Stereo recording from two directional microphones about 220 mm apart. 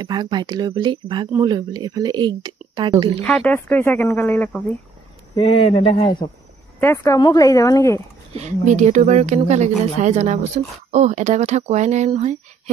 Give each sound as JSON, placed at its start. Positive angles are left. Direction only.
{"t": 0.0, "sound": "speech", "side_deg": -20}
{"t": 3.3, "sound": "speech", "side_deg": 5}
{"t": 5.3, "sound": "speech", "side_deg": 25}
{"t": 6.8, "sound": "speech", "side_deg": 15}
{"t": 8.3, "sound": "speech", "side_deg": -30}